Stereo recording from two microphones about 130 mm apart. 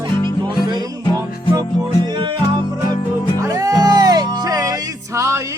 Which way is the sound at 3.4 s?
25° right (ahead or behind).